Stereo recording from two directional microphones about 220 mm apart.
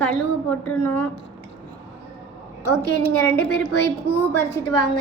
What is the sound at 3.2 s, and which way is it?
Speech, 10° left (ahead or behind).